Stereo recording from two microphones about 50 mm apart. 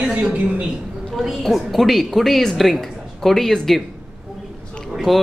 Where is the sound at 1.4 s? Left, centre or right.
Centre.